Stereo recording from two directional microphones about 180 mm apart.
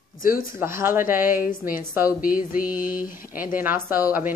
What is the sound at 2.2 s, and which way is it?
Mantra, 50° left (ahead or behind).